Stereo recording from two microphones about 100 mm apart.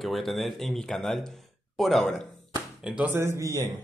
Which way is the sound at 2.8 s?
10° right (ahead or behind).